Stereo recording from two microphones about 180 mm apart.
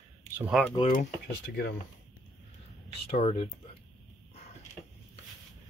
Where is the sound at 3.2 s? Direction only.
30° left (ahead or behind).